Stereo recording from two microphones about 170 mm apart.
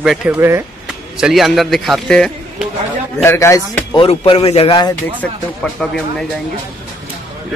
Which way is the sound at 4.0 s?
35° left (ahead or behind).